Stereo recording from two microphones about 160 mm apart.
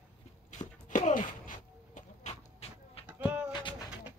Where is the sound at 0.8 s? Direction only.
50° left (ahead or behind).